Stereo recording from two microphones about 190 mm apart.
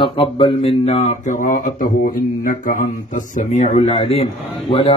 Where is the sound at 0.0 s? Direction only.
25° left (ahead or behind).